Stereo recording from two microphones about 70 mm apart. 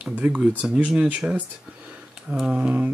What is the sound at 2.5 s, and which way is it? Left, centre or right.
Speech, right.